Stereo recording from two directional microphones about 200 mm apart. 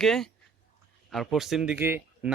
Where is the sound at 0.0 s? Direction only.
Centre (ahead or behind).